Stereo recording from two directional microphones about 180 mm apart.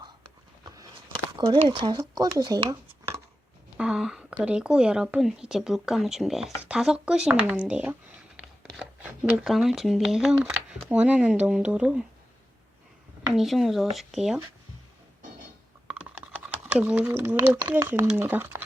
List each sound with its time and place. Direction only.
0.8 s a sound: 25° right (ahead or behind)
1.5 s speech: 25° right (ahead or behind)
3.8 s a sound: 5° right (ahead or behind)
4.4 s speech: 5° right (ahead or behind)
8.6 s a sound: 5° right (ahead or behind)
9.4 s speech: centre (ahead or behind)
13.3 s speech: centre (ahead or behind)
15.9 s typing: 5° right (ahead or behind)
17.6 s speech: 15° right (ahead or behind)